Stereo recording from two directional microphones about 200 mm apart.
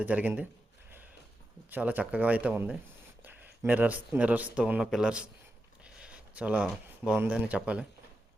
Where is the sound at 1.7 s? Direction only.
10° right (ahead or behind).